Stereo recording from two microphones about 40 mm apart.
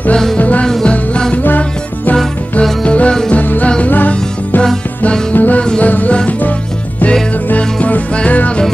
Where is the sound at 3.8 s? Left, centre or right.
Left.